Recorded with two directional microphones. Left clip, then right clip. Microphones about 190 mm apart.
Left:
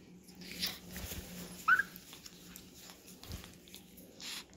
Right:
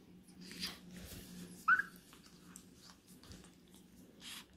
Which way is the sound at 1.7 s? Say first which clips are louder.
Left 3 dB; 25° right (ahead or behind).